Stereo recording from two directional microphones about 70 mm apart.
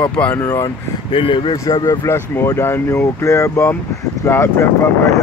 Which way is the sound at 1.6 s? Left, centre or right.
Left.